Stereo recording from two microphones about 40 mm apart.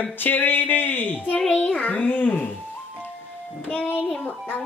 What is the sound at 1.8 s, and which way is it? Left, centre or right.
Speech, left.